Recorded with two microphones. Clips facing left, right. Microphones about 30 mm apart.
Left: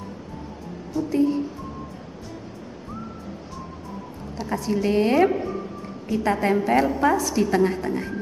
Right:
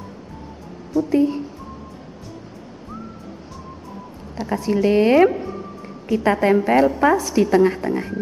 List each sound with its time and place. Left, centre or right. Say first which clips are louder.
1.1 s a woman's voice: right 2 dB; centre
4.4 s a woman's voice: right 4 dB; right
4.7 s a woman's voice: right 5 dB; centre
5.3 s a sound: left 1 dB; centre
5.8 s a sound: right 4 dB; centre
6.2 s a woman's voice: right 5 dB; centre